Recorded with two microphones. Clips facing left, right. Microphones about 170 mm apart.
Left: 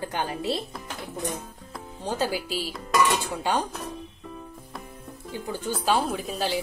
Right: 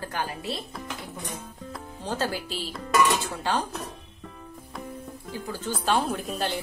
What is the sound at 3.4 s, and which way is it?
Speech, 15° left (ahead or behind).